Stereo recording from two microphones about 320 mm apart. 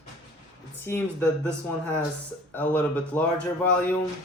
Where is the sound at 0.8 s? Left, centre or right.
Centre.